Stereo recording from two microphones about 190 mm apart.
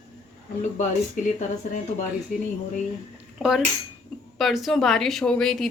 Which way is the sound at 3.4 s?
Centre (ahead or behind).